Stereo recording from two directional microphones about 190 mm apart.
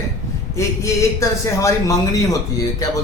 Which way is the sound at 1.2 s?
15° left (ahead or behind).